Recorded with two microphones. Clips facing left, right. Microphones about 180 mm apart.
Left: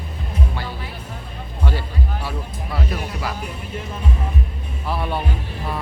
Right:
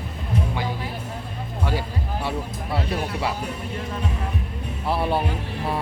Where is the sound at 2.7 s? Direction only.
25° right (ahead or behind).